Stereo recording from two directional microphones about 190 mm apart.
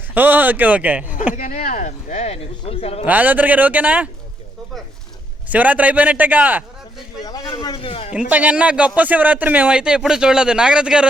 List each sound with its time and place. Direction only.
0.1 s a man's voice: 10° right (ahead or behind)
1.4 s speech: 45° left (ahead or behind)
3.1 s a man's voice: 10° right (ahead or behind)
5.5 s a man's voice: 10° right (ahead or behind)
7.3 s speech: 20° left (ahead or behind)
8.3 s speech: 5° right (ahead or behind)